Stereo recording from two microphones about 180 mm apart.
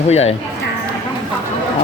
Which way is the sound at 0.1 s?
35° left (ahead or behind).